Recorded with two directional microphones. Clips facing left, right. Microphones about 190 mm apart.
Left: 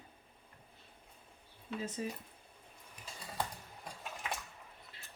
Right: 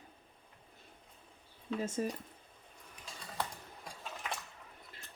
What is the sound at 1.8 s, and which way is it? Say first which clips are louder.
Speech: right 4 dB; 45° right (ahead or behind).